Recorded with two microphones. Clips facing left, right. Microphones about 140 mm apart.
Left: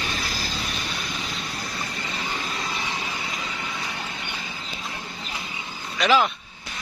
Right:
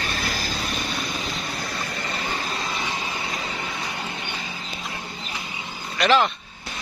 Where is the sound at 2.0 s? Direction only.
55° right (ahead or behind).